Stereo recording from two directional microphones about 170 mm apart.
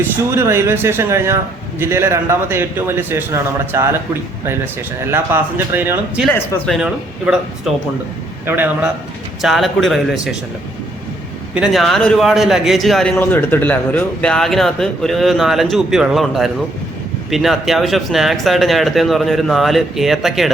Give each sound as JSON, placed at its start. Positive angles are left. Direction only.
{"t": 0.3, "sound": "a man's voice", "side_deg": -15}
{"t": 6.2, "sound": "speech", "side_deg": 15}
{"t": 6.7, "sound": "a man's voice", "side_deg": -5}
{"t": 9.4, "sound": "speech", "side_deg": 0}
{"t": 11.5, "sound": "speech", "side_deg": -5}